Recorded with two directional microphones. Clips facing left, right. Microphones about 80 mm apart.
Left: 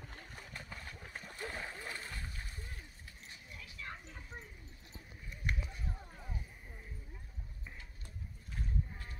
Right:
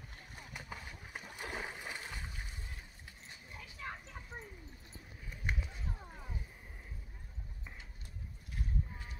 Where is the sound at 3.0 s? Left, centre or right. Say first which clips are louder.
Even; right.